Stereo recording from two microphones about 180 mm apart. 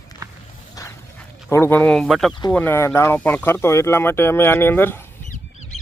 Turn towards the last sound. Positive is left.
turn(degrees=10)  # may be behind; listen again after turning